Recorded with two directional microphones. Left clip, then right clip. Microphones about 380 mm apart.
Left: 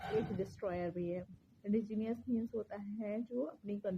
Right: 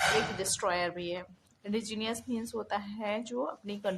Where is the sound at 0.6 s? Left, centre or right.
Left.